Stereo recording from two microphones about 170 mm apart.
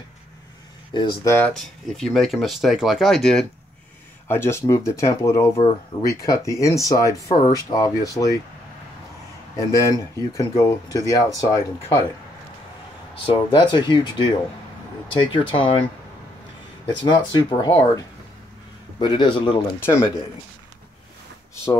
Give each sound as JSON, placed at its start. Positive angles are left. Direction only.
{"t": 0.9, "sound": "speech", "side_deg": 15}
{"t": 1.6, "sound": "speech", "side_deg": 0}
{"t": 4.3, "sound": "speech", "side_deg": 15}
{"t": 9.6, "sound": "speech", "side_deg": 20}
{"t": 13.2, "sound": "speech", "side_deg": 30}
{"t": 15.3, "sound": "speech", "side_deg": 30}
{"t": 16.8, "sound": "speech", "side_deg": 30}
{"t": 18.9, "sound": "speech", "side_deg": 25}